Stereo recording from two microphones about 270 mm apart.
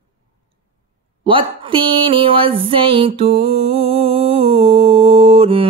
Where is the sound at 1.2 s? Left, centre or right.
Centre.